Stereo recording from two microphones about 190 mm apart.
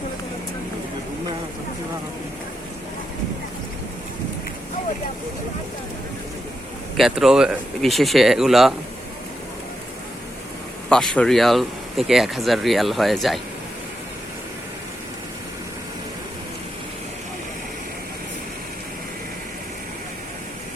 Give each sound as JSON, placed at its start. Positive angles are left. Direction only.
{"t": 6.9, "sound": "speech", "side_deg": 0}
{"t": 10.8, "sound": "speech", "side_deg": 5}